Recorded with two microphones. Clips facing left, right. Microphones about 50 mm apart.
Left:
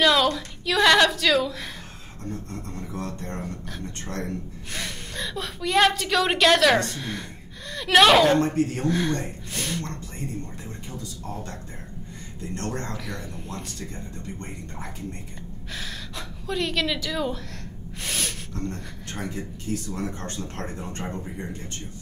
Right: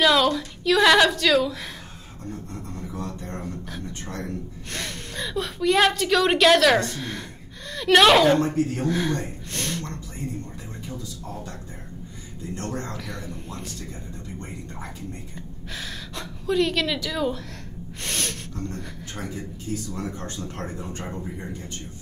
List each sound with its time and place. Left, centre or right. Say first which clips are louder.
0.0 s a woman's voice: right 1 dB; centre
4.6 s a sound: right 1 dB; centre
8.8 s speech: even; centre
12.9 s a sound: even; centre
15.7 s a woman's voice: right 1 dB; centre
18.0 s snort: right 1 dB; centre
20.2 s speech: even; left